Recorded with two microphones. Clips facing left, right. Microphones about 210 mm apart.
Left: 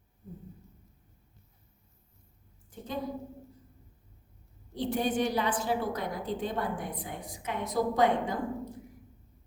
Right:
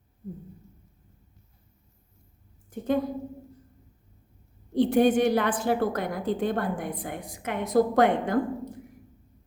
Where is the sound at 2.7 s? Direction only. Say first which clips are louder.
Right 13 dB; 55° right (ahead or behind).